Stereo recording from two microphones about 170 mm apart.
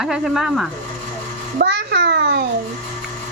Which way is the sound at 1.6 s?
80° right.